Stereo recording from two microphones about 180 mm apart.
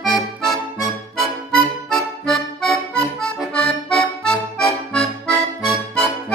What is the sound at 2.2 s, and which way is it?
Accordion, centre (ahead or behind).